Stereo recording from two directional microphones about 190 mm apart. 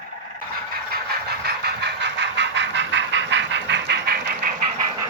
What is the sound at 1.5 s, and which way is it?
Vehicle, 60° right (ahead or behind).